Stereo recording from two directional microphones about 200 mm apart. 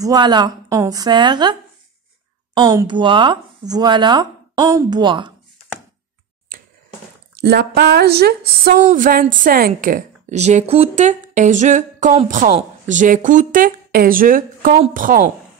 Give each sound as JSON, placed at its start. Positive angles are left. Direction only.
{"t": 0.0, "sound": "speech", "side_deg": -20}
{"t": 6.5, "sound": "a sound", "side_deg": -45}
{"t": 7.3, "sound": "speech", "side_deg": -55}
{"t": 8.7, "sound": "a woman's voice", "side_deg": -40}